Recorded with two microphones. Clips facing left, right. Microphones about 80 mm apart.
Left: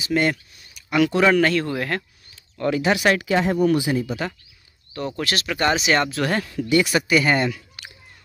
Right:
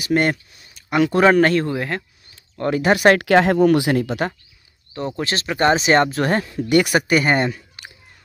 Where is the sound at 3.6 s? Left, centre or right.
Right.